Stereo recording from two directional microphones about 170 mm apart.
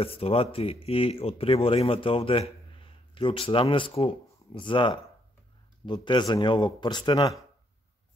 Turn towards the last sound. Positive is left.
turn(degrees=25)  # may be behind; listen again after turning